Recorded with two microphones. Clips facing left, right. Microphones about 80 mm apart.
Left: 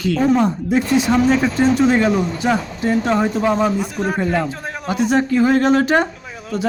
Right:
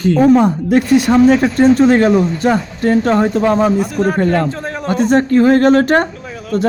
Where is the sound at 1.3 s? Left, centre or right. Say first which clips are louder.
Right 5 dB; right.